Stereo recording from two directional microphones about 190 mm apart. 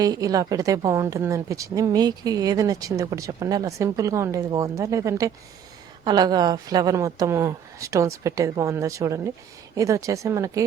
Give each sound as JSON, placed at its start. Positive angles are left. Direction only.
{"t": 0.0, "sound": "speech", "side_deg": -20}